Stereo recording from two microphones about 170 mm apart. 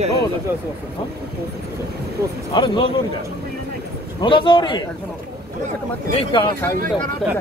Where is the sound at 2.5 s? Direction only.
30° left (ahead or behind).